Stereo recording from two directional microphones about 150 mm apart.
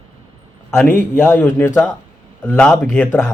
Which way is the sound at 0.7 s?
10° left (ahead or behind).